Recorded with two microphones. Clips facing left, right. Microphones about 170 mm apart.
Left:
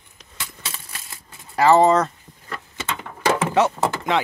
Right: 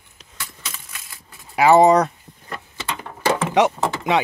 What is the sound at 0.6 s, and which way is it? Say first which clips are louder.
Typewriter: left 1 dB; 30° left (ahead or behind).